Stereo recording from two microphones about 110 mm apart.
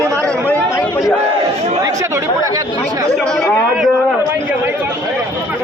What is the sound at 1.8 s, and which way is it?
Chatter, 30° right (ahead or behind).